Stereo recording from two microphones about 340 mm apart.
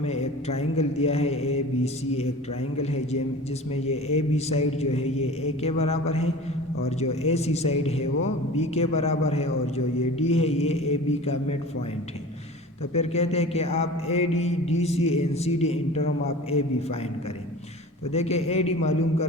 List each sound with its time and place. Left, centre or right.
0.0 s mantra: centre
2.8 s a man's voice: centre
3.8 s mantra: centre
5.1 s speech: left
5.6 s mantra: centre
12.9 s mantra: centre
18.1 s a man's voice: centre